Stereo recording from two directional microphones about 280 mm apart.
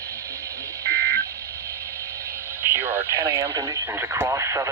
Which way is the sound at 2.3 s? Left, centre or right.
Centre.